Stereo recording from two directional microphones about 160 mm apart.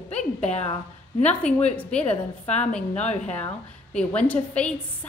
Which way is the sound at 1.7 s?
10° left (ahead or behind).